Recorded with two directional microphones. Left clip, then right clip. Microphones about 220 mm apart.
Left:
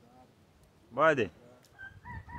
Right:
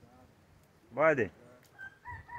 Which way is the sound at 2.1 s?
50° right (ahead or behind).